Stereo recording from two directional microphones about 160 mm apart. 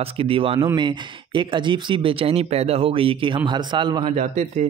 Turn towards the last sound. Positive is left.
turn(degrees=-50)  # may be behind; listen again after turning